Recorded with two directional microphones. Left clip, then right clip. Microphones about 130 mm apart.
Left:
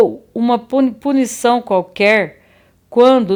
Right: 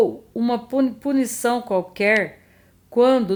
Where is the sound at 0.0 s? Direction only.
30° left (ahead or behind).